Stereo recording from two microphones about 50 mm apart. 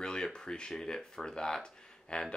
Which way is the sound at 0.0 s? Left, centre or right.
Centre.